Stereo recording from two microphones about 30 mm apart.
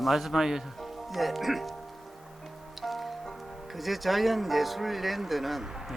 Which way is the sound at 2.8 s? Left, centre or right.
Centre.